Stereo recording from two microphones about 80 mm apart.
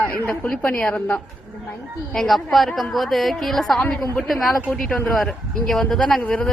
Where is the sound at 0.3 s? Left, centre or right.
Centre.